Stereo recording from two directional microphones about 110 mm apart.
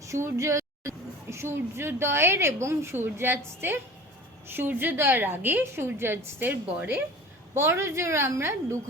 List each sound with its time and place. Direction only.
0.0 s a woman's voice: 30° right (ahead or behind)